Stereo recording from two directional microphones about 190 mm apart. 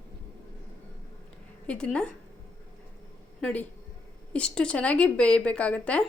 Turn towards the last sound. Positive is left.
turn(degrees=5)  # may be behind; listen again after turning